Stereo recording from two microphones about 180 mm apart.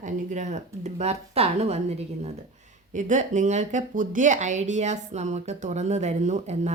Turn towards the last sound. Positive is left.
turn(degrees=-40)  # may be behind; listen again after turning